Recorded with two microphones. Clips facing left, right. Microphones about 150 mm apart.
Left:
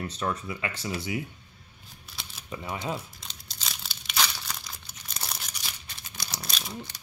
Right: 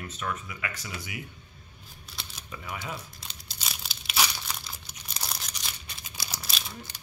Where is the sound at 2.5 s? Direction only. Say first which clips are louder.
Left 5 dB; 25° left (ahead or behind).